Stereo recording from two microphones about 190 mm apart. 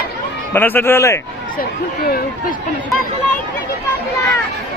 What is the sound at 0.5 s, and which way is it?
Speech, 10° left (ahead or behind).